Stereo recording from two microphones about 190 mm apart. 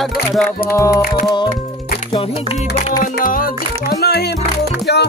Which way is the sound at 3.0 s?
45° left (ahead or behind).